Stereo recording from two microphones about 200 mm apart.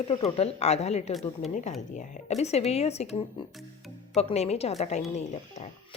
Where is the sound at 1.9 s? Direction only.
35° left (ahead or behind).